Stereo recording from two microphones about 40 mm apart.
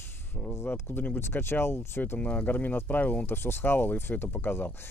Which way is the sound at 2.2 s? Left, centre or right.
Left.